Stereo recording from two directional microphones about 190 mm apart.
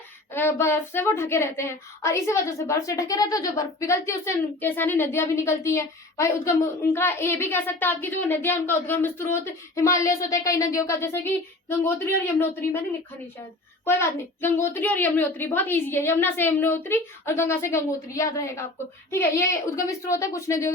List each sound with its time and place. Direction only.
0.3 s speech: 15° left (ahead or behind)
13.8 s speech: 10° left (ahead or behind)